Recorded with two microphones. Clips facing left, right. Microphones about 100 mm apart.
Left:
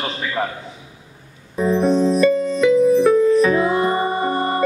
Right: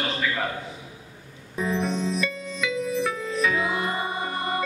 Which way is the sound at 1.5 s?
40° left (ahead or behind).